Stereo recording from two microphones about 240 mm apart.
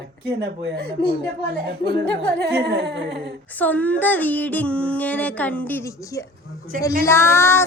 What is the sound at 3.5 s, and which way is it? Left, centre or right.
Speech, centre.